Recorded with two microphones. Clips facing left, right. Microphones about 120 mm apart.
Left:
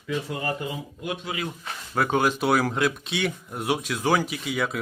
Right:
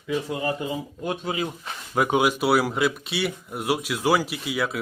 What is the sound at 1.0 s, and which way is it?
Speech, 35° right (ahead or behind).